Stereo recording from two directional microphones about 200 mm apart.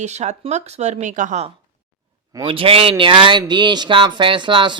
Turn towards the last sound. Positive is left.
turn(degrees=-25)  # may be behind; listen again after turning